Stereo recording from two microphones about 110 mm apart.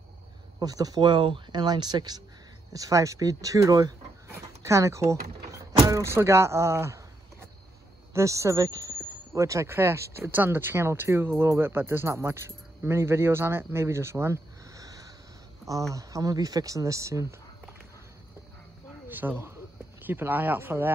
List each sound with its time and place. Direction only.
0.6 s speech: 35° right (ahead or behind)
4.3 s power windows: 25° right (ahead or behind)
5.9 s speech: 25° right (ahead or behind)
19.0 s speech: 15° right (ahead or behind)